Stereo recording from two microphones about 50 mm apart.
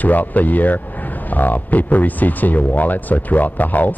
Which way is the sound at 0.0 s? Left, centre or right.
Left.